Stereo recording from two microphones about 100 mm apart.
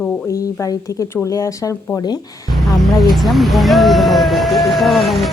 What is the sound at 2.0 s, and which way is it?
Speech, 45° left (ahead or behind).